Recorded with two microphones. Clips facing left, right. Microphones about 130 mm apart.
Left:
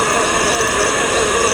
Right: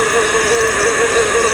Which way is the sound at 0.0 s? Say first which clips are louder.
Right 2 dB; 20° left (ahead or behind).